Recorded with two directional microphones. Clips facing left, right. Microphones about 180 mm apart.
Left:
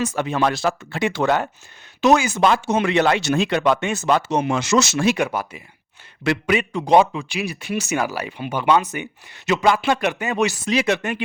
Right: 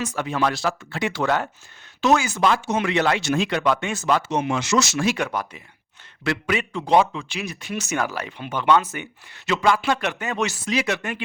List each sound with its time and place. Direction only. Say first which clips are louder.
0.2 s speech: left 1 dB; 25° left (ahead or behind)
3.2 s speech: left 2 dB; 65° left (ahead or behind)
3.5 s speech: left 3 dB; 20° left (ahead or behind)
4.3 s speech: left 3 dB; 40° left (ahead or behind)
4.8 s speech: left 3 dB; 25° left (ahead or behind)
5.1 s speech: left 3 dB; 10° left (ahead or behind)
6.2 s speech: left 4 dB; 20° left (ahead or behind)
10.7 s speech: left 4 dB; 25° left (ahead or behind)